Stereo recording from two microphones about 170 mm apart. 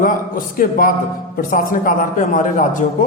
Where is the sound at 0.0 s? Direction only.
55° left (ahead or behind).